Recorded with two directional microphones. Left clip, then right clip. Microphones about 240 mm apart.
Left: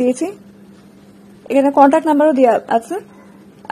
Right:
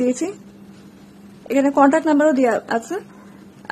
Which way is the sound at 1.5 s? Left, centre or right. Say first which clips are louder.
Left 4 dB; centre.